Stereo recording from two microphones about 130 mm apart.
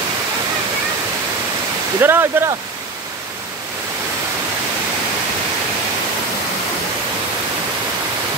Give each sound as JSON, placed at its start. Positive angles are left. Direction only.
{"t": 2.0, "sound": "speech", "side_deg": -20}